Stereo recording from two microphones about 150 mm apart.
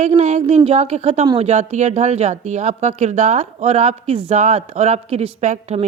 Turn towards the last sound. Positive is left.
turn(degrees=-50)  # may be behind; listen again after turning